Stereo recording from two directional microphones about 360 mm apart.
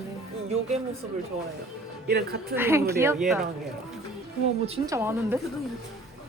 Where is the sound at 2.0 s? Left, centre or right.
Right.